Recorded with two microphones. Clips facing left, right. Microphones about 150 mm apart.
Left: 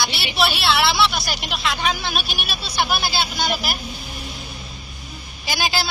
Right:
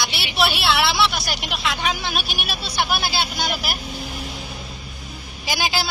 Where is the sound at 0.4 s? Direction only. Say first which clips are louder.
Even; 10° right (ahead or behind).